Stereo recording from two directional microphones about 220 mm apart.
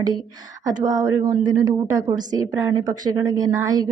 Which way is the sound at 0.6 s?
15° right (ahead or behind).